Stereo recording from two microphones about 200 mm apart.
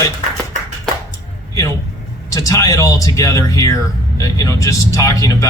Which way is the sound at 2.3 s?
15° left (ahead or behind).